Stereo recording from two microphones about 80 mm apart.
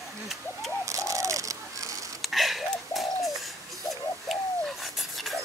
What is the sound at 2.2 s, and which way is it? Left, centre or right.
Bird, centre.